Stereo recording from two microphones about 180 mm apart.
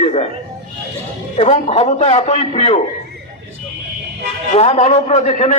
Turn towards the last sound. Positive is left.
turn(degrees=35)  # may be behind; listen again after turning